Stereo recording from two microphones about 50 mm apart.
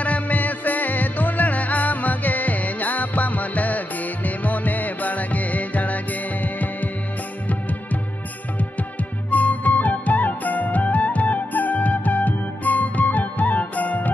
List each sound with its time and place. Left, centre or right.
0.0 s music: left
9.3 s music: left